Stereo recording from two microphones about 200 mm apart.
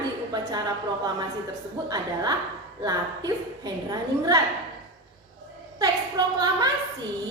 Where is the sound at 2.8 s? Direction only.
20° right (ahead or behind).